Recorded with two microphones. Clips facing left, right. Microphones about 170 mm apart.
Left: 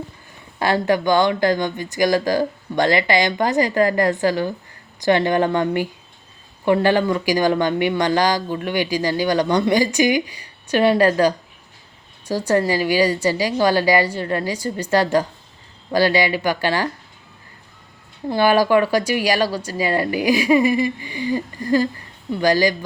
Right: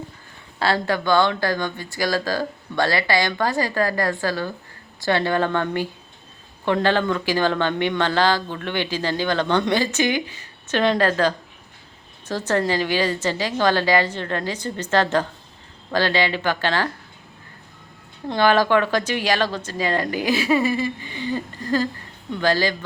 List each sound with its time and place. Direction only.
0.6 s speech: 15° left (ahead or behind)
18.3 s speech: 10° left (ahead or behind)